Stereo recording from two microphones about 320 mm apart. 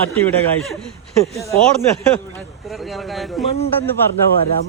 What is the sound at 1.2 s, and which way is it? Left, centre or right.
Speech, centre.